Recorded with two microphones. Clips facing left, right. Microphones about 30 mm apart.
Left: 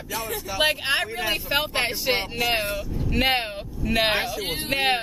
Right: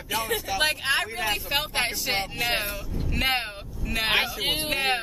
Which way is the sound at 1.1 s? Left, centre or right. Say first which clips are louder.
Left 2 dB; centre.